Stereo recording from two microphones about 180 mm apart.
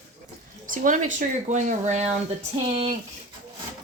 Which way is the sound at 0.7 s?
45° right (ahead or behind).